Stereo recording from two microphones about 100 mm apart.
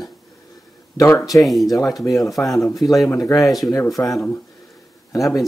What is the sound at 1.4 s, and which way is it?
Speech, centre (ahead or behind).